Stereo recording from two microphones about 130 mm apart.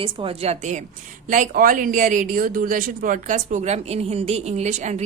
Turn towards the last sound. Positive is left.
turn(degrees=-65)  # may be behind; listen again after turning